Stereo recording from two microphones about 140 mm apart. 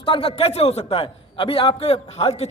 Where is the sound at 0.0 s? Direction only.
40° left (ahead or behind).